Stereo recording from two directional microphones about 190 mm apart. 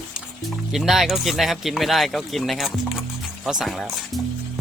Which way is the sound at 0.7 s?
Centre (ahead or behind).